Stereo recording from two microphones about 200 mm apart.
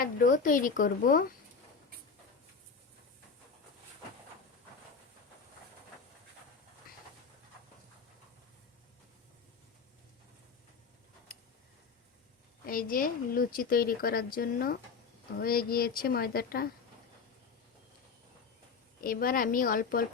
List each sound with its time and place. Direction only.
0.0 s speech: 45° left (ahead or behind)
12.6 s speech: 45° left (ahead or behind)
19.0 s speech: 45° left (ahead or behind)